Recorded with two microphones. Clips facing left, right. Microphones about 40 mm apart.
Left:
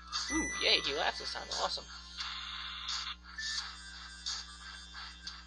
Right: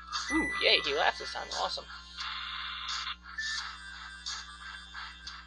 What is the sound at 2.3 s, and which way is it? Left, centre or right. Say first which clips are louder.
Music: right 6 dB; right.